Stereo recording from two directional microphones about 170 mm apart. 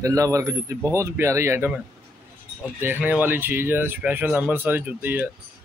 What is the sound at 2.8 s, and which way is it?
Speech, 10° right (ahead or behind).